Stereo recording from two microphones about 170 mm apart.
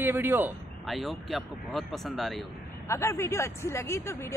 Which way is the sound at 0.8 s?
Centre (ahead or behind).